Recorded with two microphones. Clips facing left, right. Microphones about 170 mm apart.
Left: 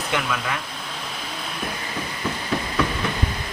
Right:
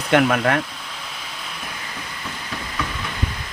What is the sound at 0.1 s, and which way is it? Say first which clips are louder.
Speech: right 11 dB; 60° right (ahead or behind).